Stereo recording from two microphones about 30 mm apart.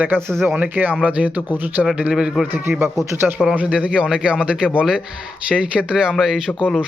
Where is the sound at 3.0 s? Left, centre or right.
Centre.